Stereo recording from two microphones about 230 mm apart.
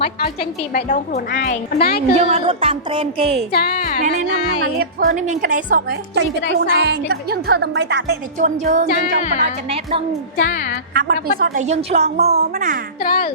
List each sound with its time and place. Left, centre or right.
0.8 s a woman's voice: left
2.1 s a woman's voice: right
3.5 s speech: left
4.6 s a woman's voice: right
8.4 s a woman's voice: right
9.1 s speech: left
10.4 s speech: left
10.9 s a woman's voice: right
13.0 s speech: left